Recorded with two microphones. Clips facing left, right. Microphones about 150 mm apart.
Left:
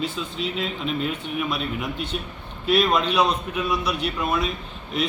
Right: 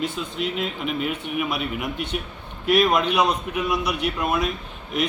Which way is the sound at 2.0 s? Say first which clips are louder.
Right 1 dB; 65° right (ahead or behind).